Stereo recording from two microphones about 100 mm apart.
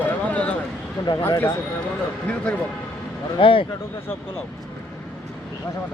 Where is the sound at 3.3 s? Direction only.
60° left (ahead or behind).